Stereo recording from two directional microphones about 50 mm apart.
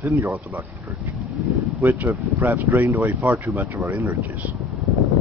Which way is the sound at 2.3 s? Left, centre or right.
Right.